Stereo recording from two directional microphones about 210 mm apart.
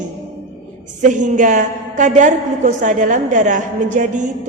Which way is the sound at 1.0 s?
35° right (ahead or behind).